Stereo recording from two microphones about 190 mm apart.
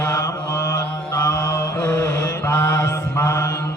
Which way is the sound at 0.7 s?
15° left (ahead or behind).